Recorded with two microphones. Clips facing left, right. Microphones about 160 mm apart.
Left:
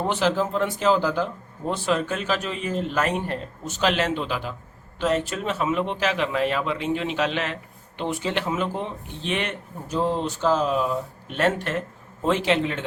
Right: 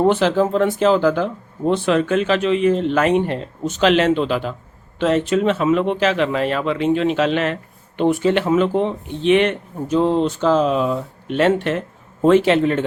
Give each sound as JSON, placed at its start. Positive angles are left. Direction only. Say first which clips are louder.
{"t": 0.1, "sound": "speech", "louder": "right 6 dB", "side_deg": -55}
{"t": 12.2, "sound": "a man's voice", "louder": "right 8 dB", "side_deg": -55}